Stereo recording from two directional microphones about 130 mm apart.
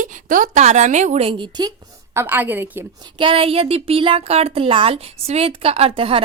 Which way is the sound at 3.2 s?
45° right (ahead or behind).